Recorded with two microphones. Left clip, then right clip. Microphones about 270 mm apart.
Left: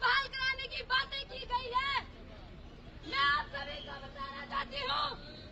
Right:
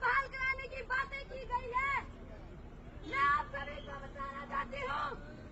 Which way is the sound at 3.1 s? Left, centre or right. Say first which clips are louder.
Left 1 dB; centre.